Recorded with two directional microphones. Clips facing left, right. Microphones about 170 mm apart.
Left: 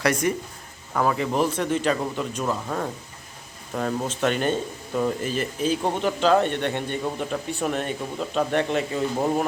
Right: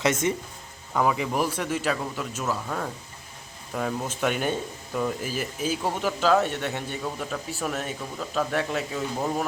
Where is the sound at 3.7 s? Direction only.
Centre (ahead or behind).